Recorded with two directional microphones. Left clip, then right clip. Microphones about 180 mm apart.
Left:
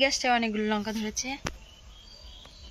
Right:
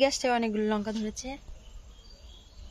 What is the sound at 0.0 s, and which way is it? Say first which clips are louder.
Speech: left 1 dB; 65° right (ahead or behind).